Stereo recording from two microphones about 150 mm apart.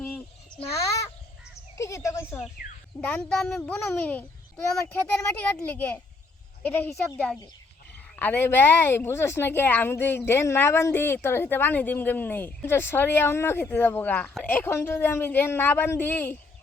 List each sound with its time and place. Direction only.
0.7 s crow: 20° left (ahead or behind)
1.8 s speech: 20° left (ahead or behind)
3.0 s a woman's voice: 10° left (ahead or behind)